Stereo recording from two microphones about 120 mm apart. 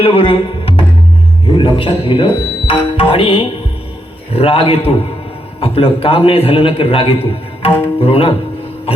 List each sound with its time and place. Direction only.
0.0 s a man's voice: 50° left (ahead or behind)